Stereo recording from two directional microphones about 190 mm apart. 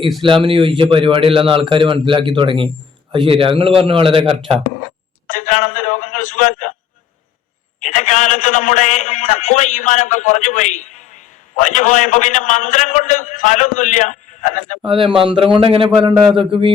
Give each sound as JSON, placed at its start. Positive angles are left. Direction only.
{"t": 0.2, "sound": "a man's voice", "side_deg": -25}
{"t": 5.3, "sound": "a man's voice", "side_deg": 40}
{"t": 7.8, "sound": "a man's voice", "side_deg": 40}
{"t": 14.8, "sound": "a man's voice", "side_deg": -25}